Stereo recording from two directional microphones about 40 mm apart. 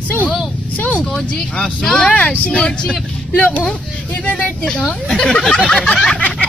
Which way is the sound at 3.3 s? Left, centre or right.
Left.